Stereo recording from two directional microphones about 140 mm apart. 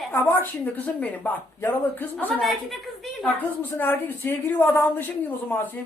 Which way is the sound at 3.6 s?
15° left (ahead or behind).